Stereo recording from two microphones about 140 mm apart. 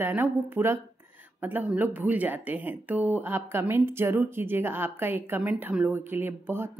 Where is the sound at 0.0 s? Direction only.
15° right (ahead or behind).